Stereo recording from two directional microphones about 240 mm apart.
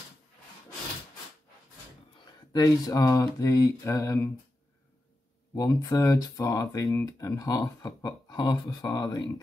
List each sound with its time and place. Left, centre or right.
2.5 s speech: centre
5.6 s speech: centre